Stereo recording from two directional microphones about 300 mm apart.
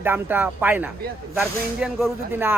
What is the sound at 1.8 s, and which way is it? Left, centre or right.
Speech, centre.